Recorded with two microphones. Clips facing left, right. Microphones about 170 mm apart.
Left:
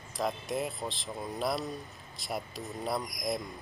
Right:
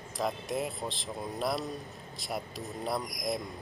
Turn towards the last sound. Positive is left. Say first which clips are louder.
# even
turn(degrees=0)  # may be behind; listen again after turning